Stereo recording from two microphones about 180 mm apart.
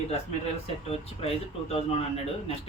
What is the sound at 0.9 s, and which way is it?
Speech, 35° left (ahead or behind).